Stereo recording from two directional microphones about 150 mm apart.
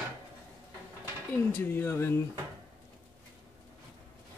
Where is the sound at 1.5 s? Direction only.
15° left (ahead or behind).